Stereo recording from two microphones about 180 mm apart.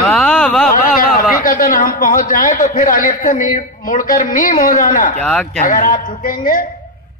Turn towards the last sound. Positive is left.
turn(degrees=50)  # may be behind; listen again after turning